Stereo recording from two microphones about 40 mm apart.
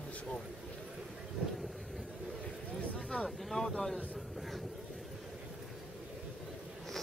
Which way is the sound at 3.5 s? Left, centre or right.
Centre.